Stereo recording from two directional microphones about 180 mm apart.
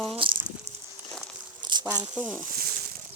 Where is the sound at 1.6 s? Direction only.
25° right (ahead or behind).